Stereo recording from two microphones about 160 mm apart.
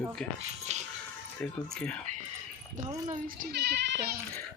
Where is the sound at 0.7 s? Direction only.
45° right (ahead or behind).